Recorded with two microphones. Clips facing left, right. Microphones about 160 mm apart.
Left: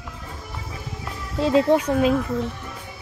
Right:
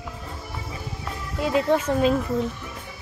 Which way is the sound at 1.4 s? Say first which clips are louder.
Left 5 dB; 25° left (ahead or behind).